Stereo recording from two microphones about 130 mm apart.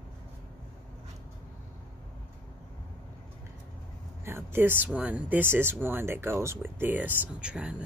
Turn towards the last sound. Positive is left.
turn(degrees=-10)  # may be behind; listen again after turning